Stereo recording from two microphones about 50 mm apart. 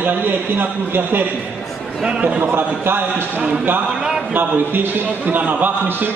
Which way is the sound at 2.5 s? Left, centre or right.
Right.